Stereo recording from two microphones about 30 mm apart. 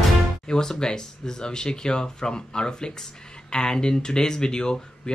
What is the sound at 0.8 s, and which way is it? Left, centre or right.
Speech, left.